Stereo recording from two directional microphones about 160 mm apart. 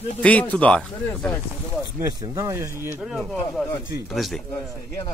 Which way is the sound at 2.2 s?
20° right (ahead or behind).